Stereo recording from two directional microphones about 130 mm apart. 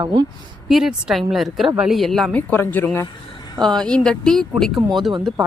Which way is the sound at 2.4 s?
15° left (ahead or behind).